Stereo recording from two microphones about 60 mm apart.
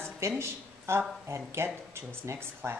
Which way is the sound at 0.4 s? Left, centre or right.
Right.